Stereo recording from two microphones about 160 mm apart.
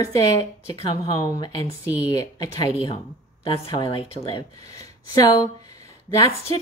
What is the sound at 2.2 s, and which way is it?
Speech, 25° left (ahead or behind).